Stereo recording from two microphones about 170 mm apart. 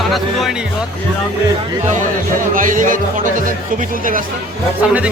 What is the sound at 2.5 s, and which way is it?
Speech, 50° right (ahead or behind).